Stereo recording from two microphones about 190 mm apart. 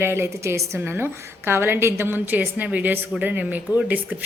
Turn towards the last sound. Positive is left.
turn(degrees=-10)  # may be behind; listen again after turning